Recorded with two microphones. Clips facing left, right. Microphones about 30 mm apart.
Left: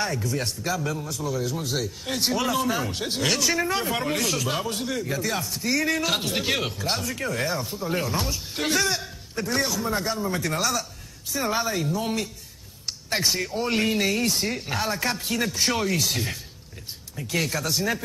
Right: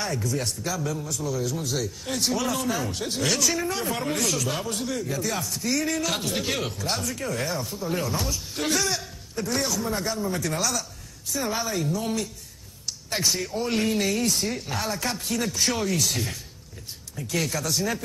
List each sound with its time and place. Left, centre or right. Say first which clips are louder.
0.0 s speech: left 1 dB; centre
2.8 s speech: left 1 dB; left
13.1 s speech: left 1 dB; centre